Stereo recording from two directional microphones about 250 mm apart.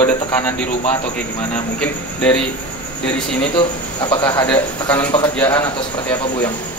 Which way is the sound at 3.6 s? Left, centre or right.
Centre.